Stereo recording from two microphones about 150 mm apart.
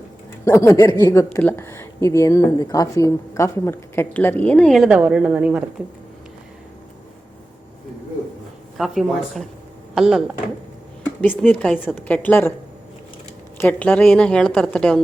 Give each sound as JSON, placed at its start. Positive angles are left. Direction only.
{"t": 0.4, "sound": "a woman's voice", "side_deg": 20}
{"t": 8.8, "sound": "speech", "side_deg": 0}
{"t": 11.2, "sound": "a woman's voice", "side_deg": 10}
{"t": 13.6, "sound": "a woman's voice", "side_deg": 10}